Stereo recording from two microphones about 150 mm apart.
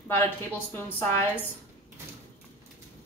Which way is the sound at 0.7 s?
15° left (ahead or behind).